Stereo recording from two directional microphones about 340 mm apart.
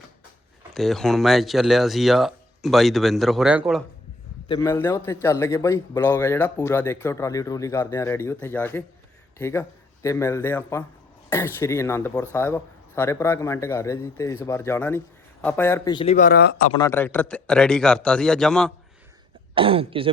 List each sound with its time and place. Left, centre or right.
0.7 s speech: centre
4.4 s a man's voice: centre; by 16.7 s left
16.7 s speech: centre
19.5 s speech: centre